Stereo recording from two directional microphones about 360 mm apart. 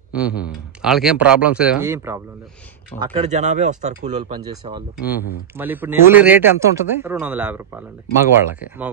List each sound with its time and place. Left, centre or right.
0.1 s speech: centre
3.0 s speech: centre
4.9 s speech: centre